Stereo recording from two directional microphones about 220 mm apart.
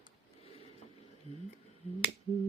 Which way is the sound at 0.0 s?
25° left (ahead or behind).